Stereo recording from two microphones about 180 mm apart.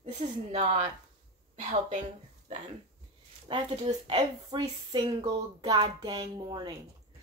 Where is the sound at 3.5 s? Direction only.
30° right (ahead or behind).